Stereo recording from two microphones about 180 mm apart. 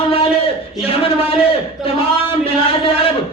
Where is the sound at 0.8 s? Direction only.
30° left (ahead or behind).